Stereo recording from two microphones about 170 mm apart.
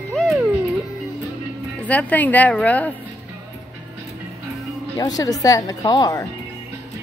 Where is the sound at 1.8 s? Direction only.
10° left (ahead or behind).